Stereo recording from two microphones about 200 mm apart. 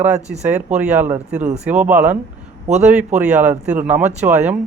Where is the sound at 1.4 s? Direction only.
35° right (ahead or behind).